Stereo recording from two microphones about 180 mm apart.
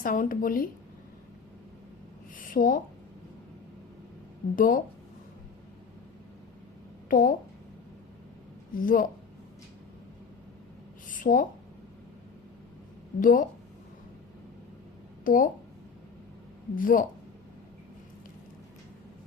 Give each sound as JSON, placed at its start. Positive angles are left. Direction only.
{"t": 0.0, "sound": "a woman's voice", "side_deg": 50}
{"t": 2.4, "sound": "speech", "side_deg": 50}
{"t": 4.5, "sound": "a woman's voice", "side_deg": 50}
{"t": 7.1, "sound": "a woman's voice", "side_deg": 50}
{"t": 8.7, "sound": "a woman's voice", "side_deg": 50}
{"t": 11.1, "sound": "a sound", "side_deg": 50}
{"t": 13.1, "sound": "a woman's voice", "side_deg": 50}
{"t": 15.2, "sound": "speech", "side_deg": 50}
{"t": 16.7, "sound": "a woman's voice", "side_deg": 50}